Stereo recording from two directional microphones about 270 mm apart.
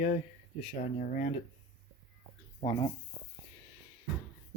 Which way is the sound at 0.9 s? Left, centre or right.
Left.